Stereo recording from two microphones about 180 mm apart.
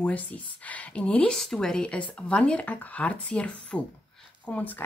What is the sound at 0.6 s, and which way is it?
Speech, 10° left (ahead or behind).